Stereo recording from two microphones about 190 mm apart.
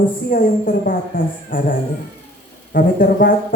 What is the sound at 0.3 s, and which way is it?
Speech, 45° left (ahead or behind).